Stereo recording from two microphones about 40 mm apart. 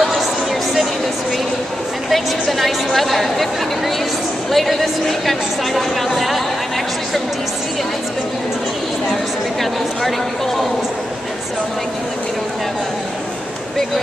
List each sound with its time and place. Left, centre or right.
2.5 s a woman's voice: centre